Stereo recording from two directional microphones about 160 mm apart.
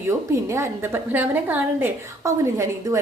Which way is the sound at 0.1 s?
20° right (ahead or behind).